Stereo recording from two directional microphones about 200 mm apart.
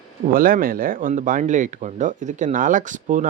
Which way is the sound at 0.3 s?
45° right (ahead or behind).